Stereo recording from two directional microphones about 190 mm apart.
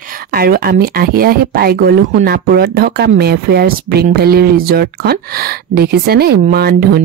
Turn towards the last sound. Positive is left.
turn(degrees=-55)  # may be behind; listen again after turning